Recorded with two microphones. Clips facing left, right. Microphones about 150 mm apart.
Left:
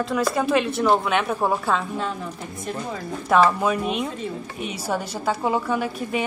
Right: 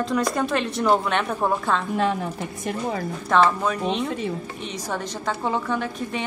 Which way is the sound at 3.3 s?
5° left (ahead or behind).